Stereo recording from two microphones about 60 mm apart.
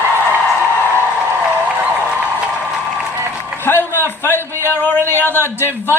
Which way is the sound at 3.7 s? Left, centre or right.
Left.